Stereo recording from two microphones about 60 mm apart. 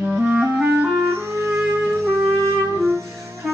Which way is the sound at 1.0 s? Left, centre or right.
Right.